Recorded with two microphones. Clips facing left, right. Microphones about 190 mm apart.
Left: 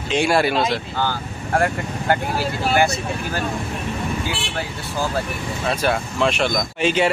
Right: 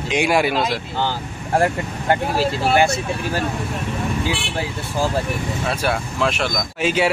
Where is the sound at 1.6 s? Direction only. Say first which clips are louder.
Right 3 dB; 25° right (ahead or behind).